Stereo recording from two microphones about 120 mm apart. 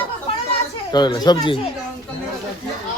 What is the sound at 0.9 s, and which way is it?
Speech, 35° left (ahead or behind).